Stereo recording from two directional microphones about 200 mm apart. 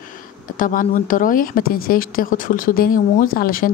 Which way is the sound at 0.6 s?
45° left (ahead or behind).